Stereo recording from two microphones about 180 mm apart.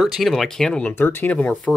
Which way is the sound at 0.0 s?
Centre (ahead or behind).